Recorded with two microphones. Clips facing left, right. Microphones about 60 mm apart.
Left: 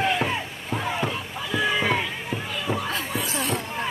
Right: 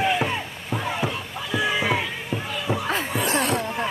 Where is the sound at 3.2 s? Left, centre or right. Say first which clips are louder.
Right 5 dB; right.